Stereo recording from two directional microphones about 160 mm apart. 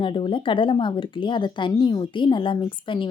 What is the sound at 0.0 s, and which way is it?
A woman's voice, 30° left (ahead or behind).